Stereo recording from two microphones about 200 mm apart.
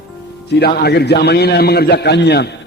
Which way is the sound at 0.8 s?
55° left (ahead or behind).